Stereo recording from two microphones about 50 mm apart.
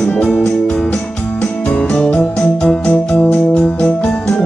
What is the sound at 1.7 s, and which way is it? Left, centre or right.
Music, centre.